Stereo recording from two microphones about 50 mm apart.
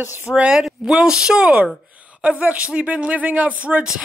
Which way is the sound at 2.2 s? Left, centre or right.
Right.